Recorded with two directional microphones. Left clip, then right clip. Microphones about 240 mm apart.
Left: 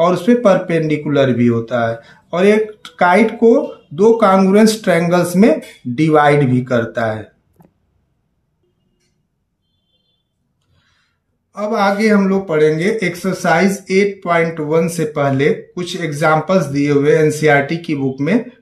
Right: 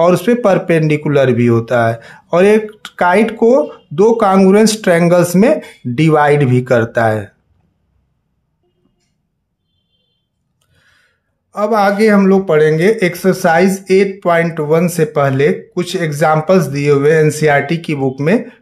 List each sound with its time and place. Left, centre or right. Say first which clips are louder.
0.0 s speech: right 2 dB; right
10.7 s speech: right 7 dB; right